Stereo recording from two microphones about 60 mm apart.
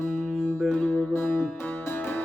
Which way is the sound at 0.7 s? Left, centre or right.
Left.